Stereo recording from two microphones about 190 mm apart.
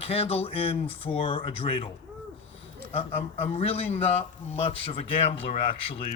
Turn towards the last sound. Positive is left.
turn(degrees=25)  # may be behind; listen again after turning